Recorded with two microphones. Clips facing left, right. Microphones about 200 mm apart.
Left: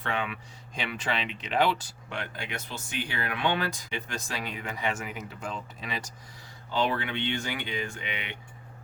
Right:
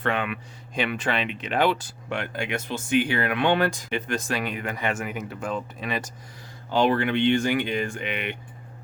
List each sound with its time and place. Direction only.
0.0 s speech: 60° right (ahead or behind)
6.8 s speech: 65° right (ahead or behind)
7.7 s speech: 50° right (ahead or behind)